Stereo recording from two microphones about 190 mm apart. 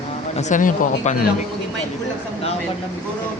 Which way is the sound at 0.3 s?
40° left (ahead or behind).